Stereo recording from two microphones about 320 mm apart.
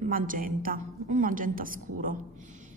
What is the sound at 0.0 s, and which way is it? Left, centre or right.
A woman's voice, right.